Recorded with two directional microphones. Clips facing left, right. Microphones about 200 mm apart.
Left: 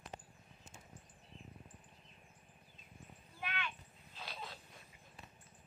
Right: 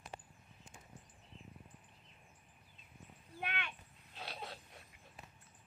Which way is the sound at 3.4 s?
60° right (ahead or behind).